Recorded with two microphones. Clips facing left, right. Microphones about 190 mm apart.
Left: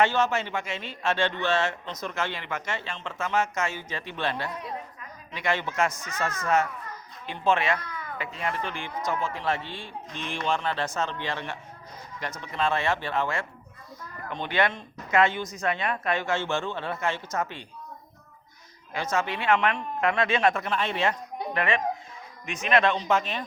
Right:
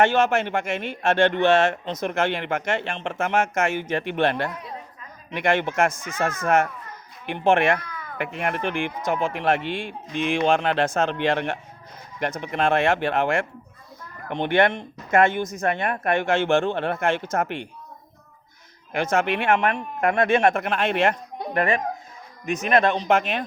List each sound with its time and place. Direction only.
0.0 s speech: 50° right (ahead or behind); by 8.9 s 70° right (ahead or behind)
9.3 s speech: 60° right (ahead or behind)
9.6 s speech: 20° right (ahead or behind)
10.2 s speech: 80° right; by 17.2 s 55° right (ahead or behind)
18.9 s speech: 55° right (ahead or behind)
23.0 s speech: 55° right (ahead or behind)